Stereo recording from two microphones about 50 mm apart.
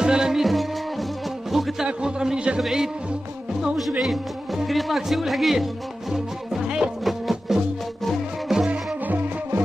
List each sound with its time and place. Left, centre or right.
0.0 s music: centre
1.9 s a sound: centre
2.6 s speech: centre
4.6 s speech: centre
6.1 s music: centre
8.6 s music: right